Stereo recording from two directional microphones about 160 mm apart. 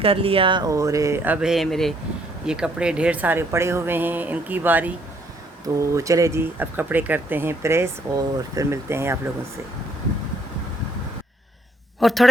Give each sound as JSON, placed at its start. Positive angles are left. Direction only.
{"t": 0.0, "sound": "speech", "side_deg": -35}
{"t": 11.9, "sound": "speech", "side_deg": 0}